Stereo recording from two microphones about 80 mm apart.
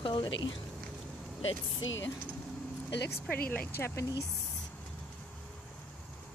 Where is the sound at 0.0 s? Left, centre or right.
Left.